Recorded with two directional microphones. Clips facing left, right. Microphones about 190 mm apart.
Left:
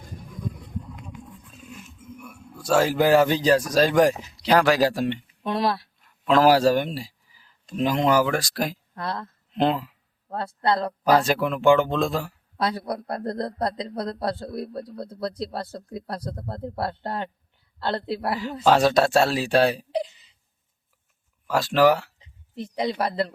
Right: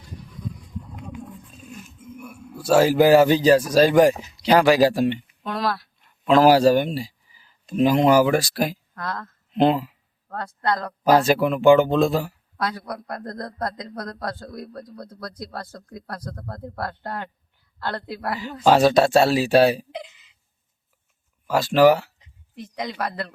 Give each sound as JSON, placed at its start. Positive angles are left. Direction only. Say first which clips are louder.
{"t": 0.0, "sound": "a sound", "louder": "left 1 dB", "side_deg": 50}
{"t": 2.1, "sound": "speech", "louder": "right 6 dB", "side_deg": -5}
{"t": 5.5, "sound": "a man's voice", "louder": "left 2 dB", "side_deg": 25}
{"t": 6.2, "sound": "speech", "louder": "right 3 dB", "side_deg": 0}
{"t": 9.0, "sound": "a man's voice", "louder": "left 1 dB", "side_deg": 30}
{"t": 9.5, "sound": "speech", "louder": "right 4 dB", "side_deg": -5}
{"t": 10.2, "sound": "a man's voice", "louder": "left 1 dB", "side_deg": 30}
{"t": 11.0, "sound": "speech", "louder": "right 4 dB", "side_deg": 0}
{"t": 12.5, "sound": "a man's voice", "louder": "left 2 dB", "side_deg": 25}
{"t": 18.6, "sound": "speech", "louder": "right 3 dB", "side_deg": 0}
{"t": 19.9, "sound": "a sound", "louder": "left 8 dB", "side_deg": 35}
{"t": 21.4, "sound": "speech", "louder": "right 3 dB", "side_deg": 0}
{"t": 22.2, "sound": "speech", "louder": "left 4 dB", "side_deg": 30}